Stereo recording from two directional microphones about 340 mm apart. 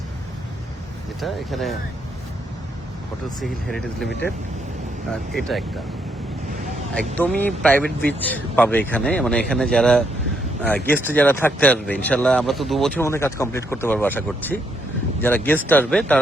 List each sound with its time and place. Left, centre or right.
1.2 s speech: centre
3.4 s speech: centre
5.3 s speech: centre
6.9 s speech: centre